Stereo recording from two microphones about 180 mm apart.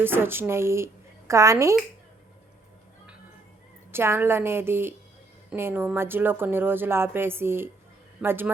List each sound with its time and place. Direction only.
0.0 s speech: 10° right (ahead or behind)
3.9 s speech: 15° right (ahead or behind)